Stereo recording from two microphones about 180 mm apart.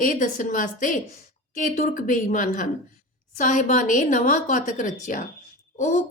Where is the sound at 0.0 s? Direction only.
45° left (ahead or behind).